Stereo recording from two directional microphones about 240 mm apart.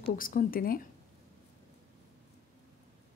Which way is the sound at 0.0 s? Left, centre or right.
Left.